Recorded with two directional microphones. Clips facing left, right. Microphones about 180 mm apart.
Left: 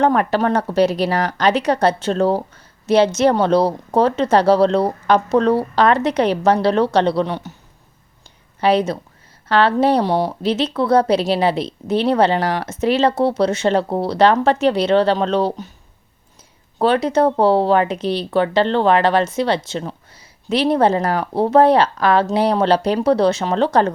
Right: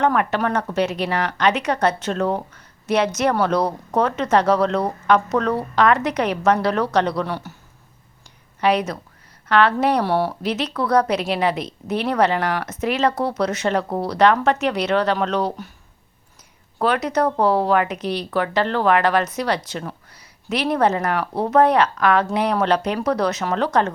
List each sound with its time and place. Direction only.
0.0 s speech: 35° left (ahead or behind)
8.6 s speech: 30° left (ahead or behind)
10.0 s speech: 15° left (ahead or behind)
10.4 s speech: 30° left (ahead or behind)
16.7 s speech: 30° left (ahead or behind)